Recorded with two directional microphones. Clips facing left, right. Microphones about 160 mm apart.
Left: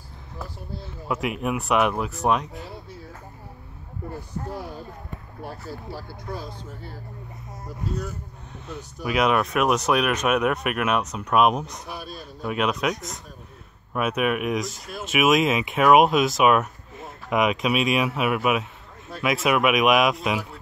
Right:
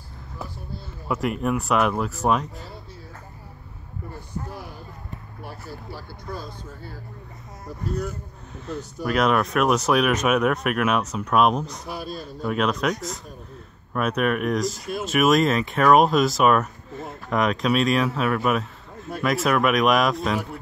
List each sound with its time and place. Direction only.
1.0 s speech: centre (ahead or behind)
8.6 s speech: 5° left (ahead or behind)